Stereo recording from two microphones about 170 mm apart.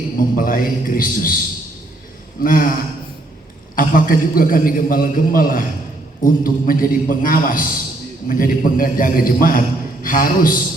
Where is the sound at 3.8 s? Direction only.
55° left (ahead or behind).